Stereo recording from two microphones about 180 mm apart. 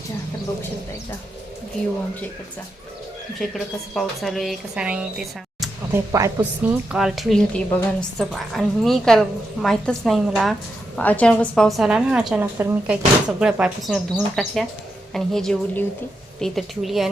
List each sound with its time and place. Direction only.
3.4 s a woman's voice: centre (ahead or behind)
5.9 s a woman's voice: 15° right (ahead or behind)
6.9 s a woman's voice: centre (ahead or behind)
10.9 s a woman's voice: 10° left (ahead or behind)